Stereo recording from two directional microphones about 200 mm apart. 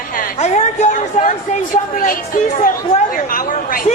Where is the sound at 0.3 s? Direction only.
35° left (ahead or behind).